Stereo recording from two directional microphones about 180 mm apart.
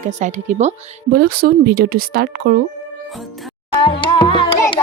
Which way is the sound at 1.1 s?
60° right (ahead or behind).